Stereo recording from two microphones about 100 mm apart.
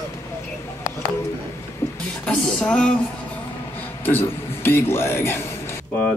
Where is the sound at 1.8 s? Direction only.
25° left (ahead or behind).